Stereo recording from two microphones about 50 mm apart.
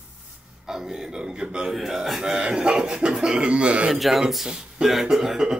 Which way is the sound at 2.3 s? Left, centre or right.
Centre.